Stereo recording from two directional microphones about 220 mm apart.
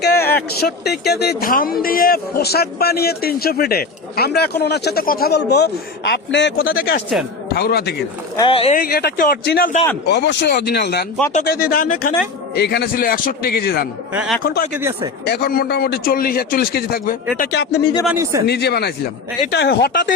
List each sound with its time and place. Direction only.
0.0 s a sound: 45° left (ahead or behind)
0.6 s speech: 50° left (ahead or behind)
8.4 s speech: 25° left (ahead or behind)
8.8 s speech: 45° left (ahead or behind)
14.1 s a man's voice: 5° right (ahead or behind)
14.4 s speech: 45° left (ahead or behind)
14.8 s a man's voice: 15° right (ahead or behind)
15.2 s speech: 45° left (ahead or behind)
18.0 s a man's voice: 10° right (ahead or behind)
18.4 s speech: 50° left (ahead or behind)